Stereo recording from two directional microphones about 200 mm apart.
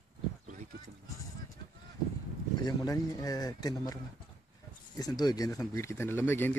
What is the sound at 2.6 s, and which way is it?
Speech, 20° left (ahead or behind).